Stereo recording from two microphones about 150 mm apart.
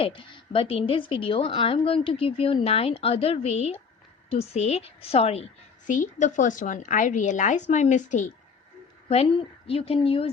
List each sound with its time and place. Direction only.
0.0 s a woman's voice: 35° left (ahead or behind)
5.9 s a woman's voice: 60° left (ahead or behind)
9.0 s a woman's voice: 40° left (ahead or behind)